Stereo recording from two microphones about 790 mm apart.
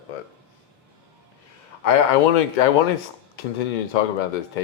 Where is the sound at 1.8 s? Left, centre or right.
Left.